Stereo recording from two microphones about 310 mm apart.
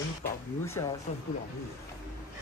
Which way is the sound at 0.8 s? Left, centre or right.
Centre.